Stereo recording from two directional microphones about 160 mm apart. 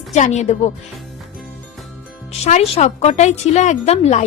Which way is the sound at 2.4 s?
40° left (ahead or behind).